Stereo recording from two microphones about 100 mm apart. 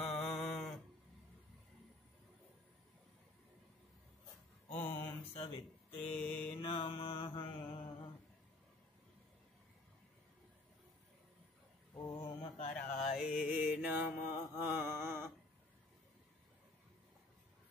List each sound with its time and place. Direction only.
0.0 s mantra: 5° left (ahead or behind)
4.6 s mantra: 20° left (ahead or behind)
5.4 s speech: 65° left (ahead or behind)
6.0 s mantra: 15° left (ahead or behind)
6.6 s mantra: 65° left (ahead or behind)
12.2 s mantra: 75° left (ahead or behind)
13.2 s mantra: 10° right (ahead or behind)